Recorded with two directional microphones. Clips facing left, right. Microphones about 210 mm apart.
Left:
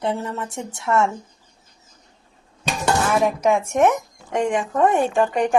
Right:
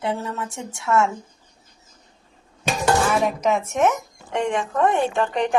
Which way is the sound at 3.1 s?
10° left (ahead or behind).